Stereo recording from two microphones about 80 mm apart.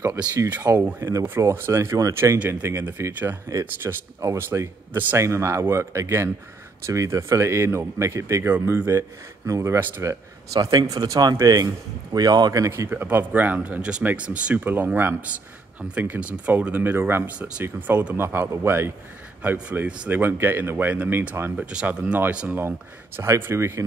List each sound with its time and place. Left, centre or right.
0.6 s speech: right
2.6 s speech: right
8.5 s speech: right
10.0 s a man's voice: right
12.6 s speech: right
13.0 s speech: right
19.4 s speech: right
21.6 s speech: centre
22.6 s speech: right